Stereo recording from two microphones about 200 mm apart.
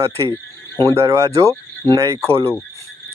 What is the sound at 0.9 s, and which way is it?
Speech, 15° right (ahead or behind).